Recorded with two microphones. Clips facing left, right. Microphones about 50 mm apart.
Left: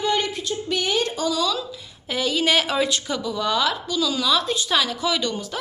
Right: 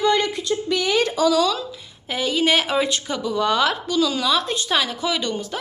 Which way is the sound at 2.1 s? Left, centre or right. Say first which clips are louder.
Right 1 dB; right.